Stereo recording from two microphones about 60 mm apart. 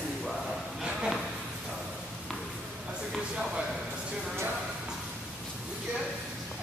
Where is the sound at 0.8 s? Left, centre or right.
Centre.